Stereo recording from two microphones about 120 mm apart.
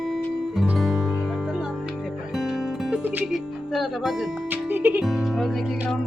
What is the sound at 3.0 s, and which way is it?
Music, 15° right (ahead or behind).